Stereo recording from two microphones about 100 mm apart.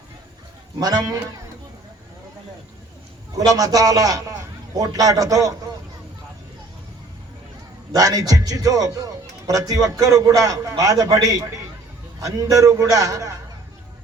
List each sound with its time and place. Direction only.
0.8 s a man's voice: 40° right (ahead or behind)
3.3 s a man's voice: 35° right (ahead or behind)
7.9 s a man's voice: 35° right (ahead or behind)